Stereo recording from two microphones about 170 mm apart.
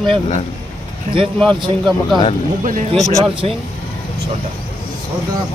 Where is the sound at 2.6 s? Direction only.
50° right (ahead or behind).